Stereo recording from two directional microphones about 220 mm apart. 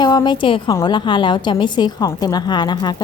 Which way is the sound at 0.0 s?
20° left (ahead or behind).